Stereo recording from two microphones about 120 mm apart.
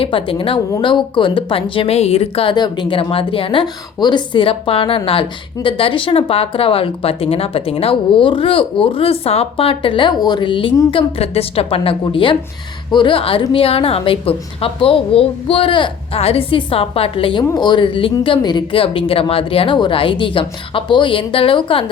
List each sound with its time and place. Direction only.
0.0 s speech: 50° left (ahead or behind)
10.9 s speech: 55° left (ahead or behind)
17.5 s speech: 35° left (ahead or behind)